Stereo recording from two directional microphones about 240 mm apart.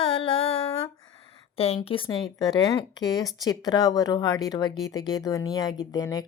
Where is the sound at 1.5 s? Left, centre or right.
Left.